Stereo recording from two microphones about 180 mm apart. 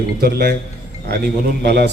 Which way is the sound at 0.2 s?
60° right (ahead or behind).